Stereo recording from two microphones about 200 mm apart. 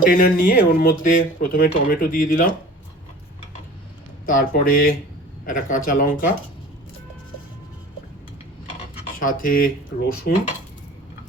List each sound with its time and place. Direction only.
0.0 s speech: 45° left (ahead or behind)
4.3 s speech: 45° left (ahead or behind)
9.1 s speech: 45° left (ahead or behind)